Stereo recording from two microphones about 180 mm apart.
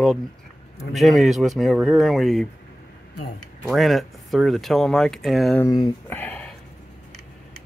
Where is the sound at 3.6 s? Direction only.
Centre (ahead or behind).